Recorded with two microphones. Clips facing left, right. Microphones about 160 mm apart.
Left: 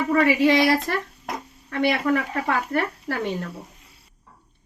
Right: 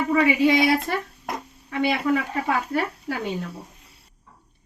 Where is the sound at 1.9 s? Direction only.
50° left (ahead or behind).